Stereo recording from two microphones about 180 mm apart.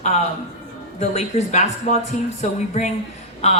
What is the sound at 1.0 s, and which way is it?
A man's voice, 40° left (ahead or behind).